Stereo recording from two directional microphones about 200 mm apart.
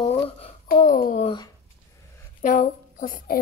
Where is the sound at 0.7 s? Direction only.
45° left (ahead or behind).